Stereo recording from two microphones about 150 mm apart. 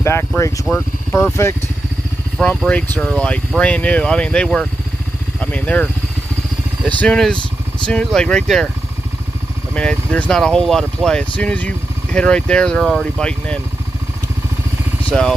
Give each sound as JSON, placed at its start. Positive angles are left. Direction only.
{"t": 0.0, "sound": "speech", "side_deg": 15}
{"t": 2.3, "sound": "speech", "side_deg": 5}
{"t": 7.0, "sound": "speech", "side_deg": 5}
{"t": 9.8, "sound": "speech", "side_deg": 10}
{"t": 15.0, "sound": "speech", "side_deg": 5}